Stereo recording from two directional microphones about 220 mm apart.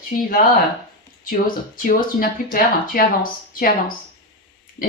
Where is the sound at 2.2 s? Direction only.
40° left (ahead or behind).